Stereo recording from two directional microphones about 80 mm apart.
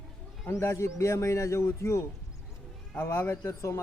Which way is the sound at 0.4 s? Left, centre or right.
Left.